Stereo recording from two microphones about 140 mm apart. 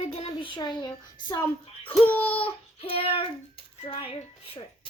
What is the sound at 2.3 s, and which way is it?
Child singing, 40° left (ahead or behind).